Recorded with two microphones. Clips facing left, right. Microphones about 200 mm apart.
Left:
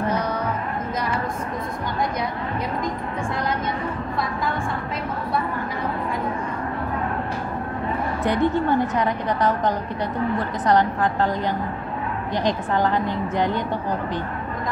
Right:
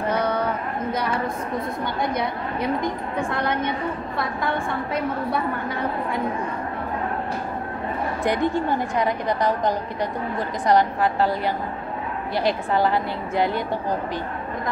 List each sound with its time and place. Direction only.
8.2 s a woman's voice: 10° right (ahead or behind)